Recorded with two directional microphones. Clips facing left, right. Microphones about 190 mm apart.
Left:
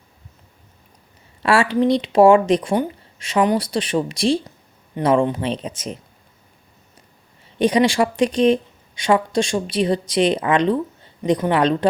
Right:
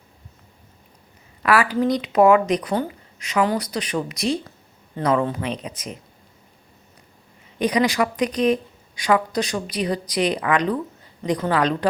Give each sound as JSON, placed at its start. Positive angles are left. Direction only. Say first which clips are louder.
{"t": 1.4, "sound": "a woman's voice", "louder": "left 2 dB", "side_deg": 30}
{"t": 7.6, "sound": "a woman's voice", "louder": "left 4 dB", "side_deg": 25}